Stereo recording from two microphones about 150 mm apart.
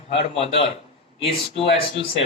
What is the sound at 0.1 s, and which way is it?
Speech, 40° left (ahead or behind).